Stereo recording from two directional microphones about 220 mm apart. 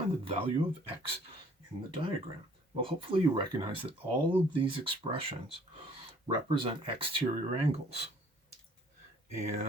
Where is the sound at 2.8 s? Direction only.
25° right (ahead or behind).